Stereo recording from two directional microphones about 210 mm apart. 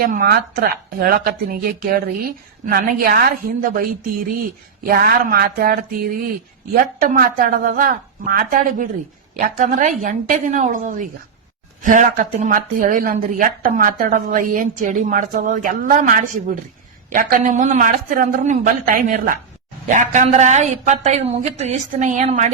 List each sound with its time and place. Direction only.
0.0 s speech: 45° right (ahead or behind)